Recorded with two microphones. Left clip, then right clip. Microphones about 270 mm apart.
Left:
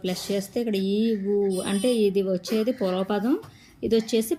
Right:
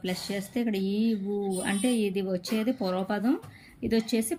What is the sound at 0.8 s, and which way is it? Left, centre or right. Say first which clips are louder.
Speech: left 5 dB; left.